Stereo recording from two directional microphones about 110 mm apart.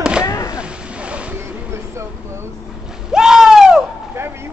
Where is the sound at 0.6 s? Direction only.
10° right (ahead or behind).